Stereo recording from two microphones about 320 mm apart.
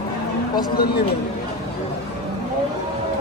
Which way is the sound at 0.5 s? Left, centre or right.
Left.